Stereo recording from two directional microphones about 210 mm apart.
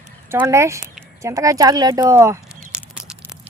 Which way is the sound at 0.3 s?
10° right (ahead or behind).